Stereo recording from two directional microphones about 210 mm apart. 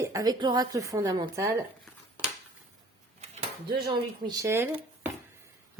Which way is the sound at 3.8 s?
20° right (ahead or behind).